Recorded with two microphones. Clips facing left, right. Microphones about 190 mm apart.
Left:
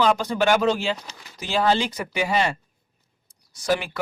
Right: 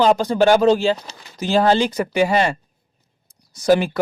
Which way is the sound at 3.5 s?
40° right (ahead or behind).